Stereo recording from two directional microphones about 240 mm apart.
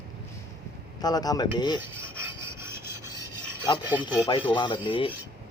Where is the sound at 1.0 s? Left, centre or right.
Centre.